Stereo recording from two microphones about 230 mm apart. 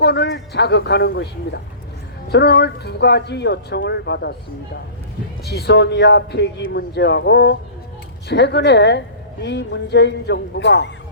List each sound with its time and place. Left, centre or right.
0.0 s a woman's voice: left
5.5 s a woman's voice: left